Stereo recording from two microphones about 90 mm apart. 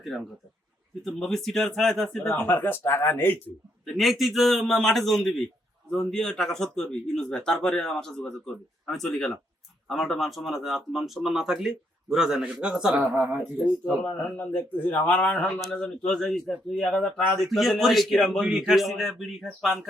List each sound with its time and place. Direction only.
1.0 s a man's voice: 5° left (ahead or behind)
2.3 s speech: 20° left (ahead or behind)
3.8 s a man's voice: centre (ahead or behind)
13.0 s speech: 20° right (ahead or behind)
14.0 s a man's voice: 15° left (ahead or behind); by 19.9 s 5° right (ahead or behind)